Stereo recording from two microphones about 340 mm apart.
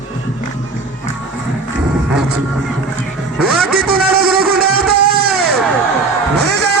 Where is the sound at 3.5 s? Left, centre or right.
Right.